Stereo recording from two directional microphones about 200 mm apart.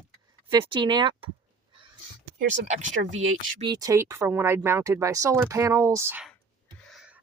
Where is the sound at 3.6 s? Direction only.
20° right (ahead or behind).